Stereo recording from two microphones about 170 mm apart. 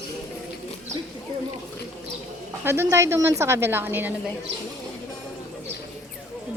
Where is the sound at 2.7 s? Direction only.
15° right (ahead or behind).